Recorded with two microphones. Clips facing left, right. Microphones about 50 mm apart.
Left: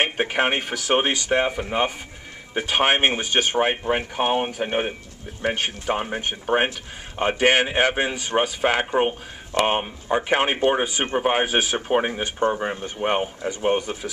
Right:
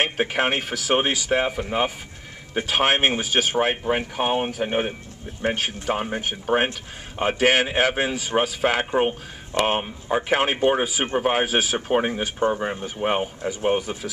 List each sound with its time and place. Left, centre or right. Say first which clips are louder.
0.0 s speech: left 1 dB; centre